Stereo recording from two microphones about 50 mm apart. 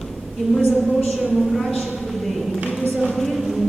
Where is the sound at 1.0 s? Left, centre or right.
Centre.